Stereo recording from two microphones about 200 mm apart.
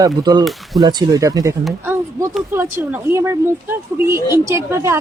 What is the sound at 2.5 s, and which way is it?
A woman's voice, 10° right (ahead or behind).